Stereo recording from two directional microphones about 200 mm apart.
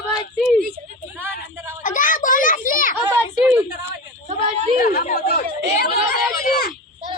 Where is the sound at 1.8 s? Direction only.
40° left (ahead or behind).